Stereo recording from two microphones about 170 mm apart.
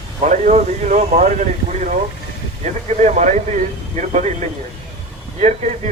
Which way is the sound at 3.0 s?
45° right (ahead or behind).